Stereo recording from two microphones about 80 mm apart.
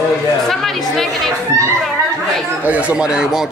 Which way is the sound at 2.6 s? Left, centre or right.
Centre.